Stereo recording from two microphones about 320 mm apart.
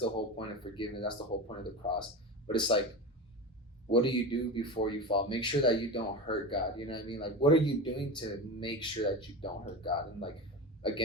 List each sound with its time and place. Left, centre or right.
0.0 s speech: centre
3.9 s speech: centre